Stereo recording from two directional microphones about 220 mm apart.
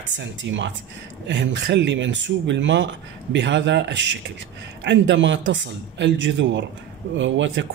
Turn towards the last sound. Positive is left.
turn(degrees=-55)  # may be behind; listen again after turning